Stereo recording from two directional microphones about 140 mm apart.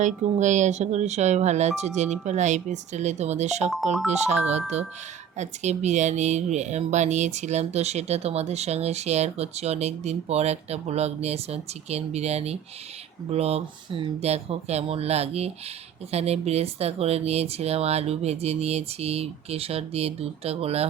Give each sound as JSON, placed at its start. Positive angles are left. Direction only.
{"t": 0.0, "sound": "speech", "side_deg": -60}